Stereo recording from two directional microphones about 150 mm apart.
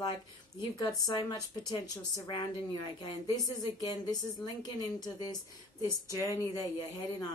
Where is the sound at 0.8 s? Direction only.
25° left (ahead or behind).